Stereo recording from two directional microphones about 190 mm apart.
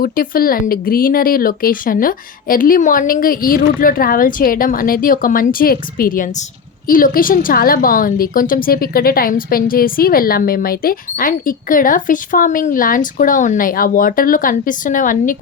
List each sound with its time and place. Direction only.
0.0 s a woman's voice: 50° left (ahead or behind)